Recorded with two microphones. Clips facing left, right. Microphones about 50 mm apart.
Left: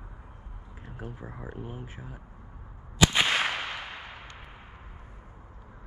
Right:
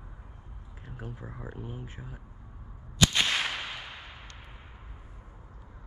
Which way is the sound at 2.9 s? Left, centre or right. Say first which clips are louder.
Left 3 dB; centre.